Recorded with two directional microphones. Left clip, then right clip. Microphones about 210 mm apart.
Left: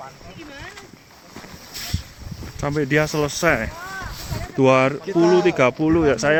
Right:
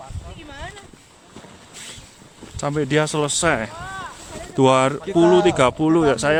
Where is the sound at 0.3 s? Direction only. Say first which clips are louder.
Right 3 dB; 35° right (ahead or behind).